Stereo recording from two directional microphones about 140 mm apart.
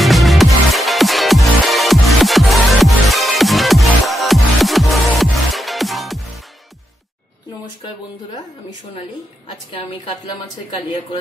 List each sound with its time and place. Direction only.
0.0 s music: centre (ahead or behind)